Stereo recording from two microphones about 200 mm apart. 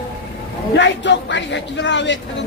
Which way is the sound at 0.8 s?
65° left (ahead or behind).